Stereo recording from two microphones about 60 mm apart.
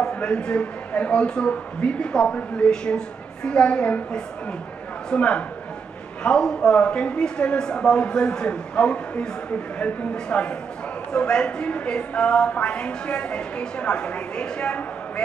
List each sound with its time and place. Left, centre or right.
0.1 s a woman's voice: centre